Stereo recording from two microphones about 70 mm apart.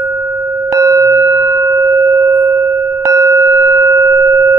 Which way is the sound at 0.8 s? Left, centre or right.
Right.